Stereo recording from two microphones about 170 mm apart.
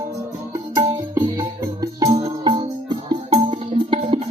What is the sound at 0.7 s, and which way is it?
Music, 20° right (ahead or behind).